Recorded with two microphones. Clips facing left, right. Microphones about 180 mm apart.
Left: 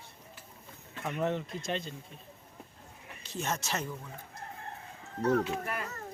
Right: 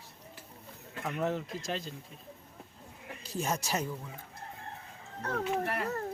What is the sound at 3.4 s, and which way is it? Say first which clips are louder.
Speech: right 2 dB; 10° right (ahead or behind).